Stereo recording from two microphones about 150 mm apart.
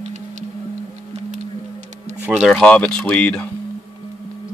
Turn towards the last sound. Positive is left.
turn(degrees=10)  # may be behind; listen again after turning